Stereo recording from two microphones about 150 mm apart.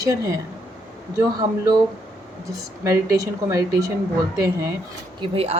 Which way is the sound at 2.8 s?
20° right (ahead or behind).